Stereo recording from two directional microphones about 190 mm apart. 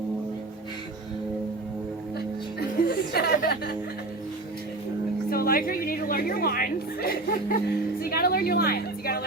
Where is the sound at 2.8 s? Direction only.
55° left (ahead or behind).